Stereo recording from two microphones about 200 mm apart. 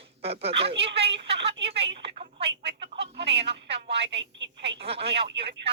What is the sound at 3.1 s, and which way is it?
A woman's voice, 60° right (ahead or behind).